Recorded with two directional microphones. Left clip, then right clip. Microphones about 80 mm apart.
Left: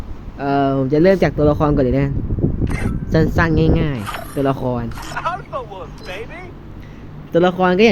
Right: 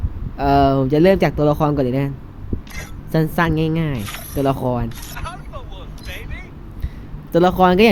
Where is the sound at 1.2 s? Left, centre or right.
Centre.